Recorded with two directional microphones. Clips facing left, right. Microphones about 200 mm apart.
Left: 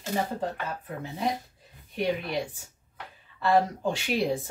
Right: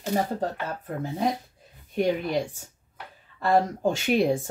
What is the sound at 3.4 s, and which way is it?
Speech, 45° right (ahead or behind).